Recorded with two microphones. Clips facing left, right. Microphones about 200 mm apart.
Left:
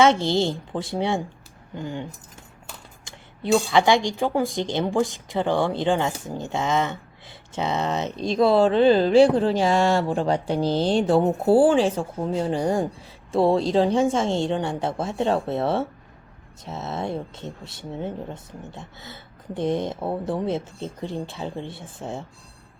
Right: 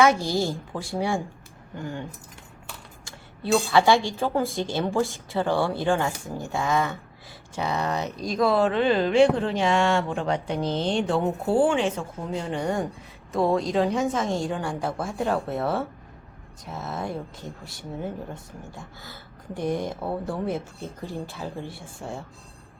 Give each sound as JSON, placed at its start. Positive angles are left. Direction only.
{"t": 0.0, "sound": "a woman's voice", "side_deg": 25}